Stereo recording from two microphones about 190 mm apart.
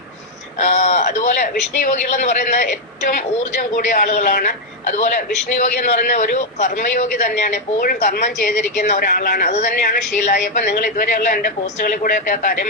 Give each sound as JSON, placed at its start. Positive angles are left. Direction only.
{"t": 0.6, "sound": "a man's voice", "side_deg": 40}